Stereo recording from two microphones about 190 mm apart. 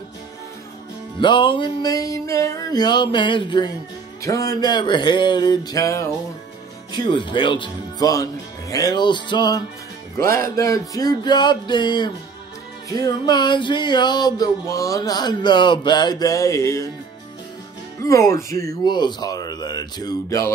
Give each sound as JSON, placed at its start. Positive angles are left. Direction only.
{"t": 1.2, "sound": "music", "side_deg": 25}
{"t": 18.0, "sound": "music", "side_deg": 15}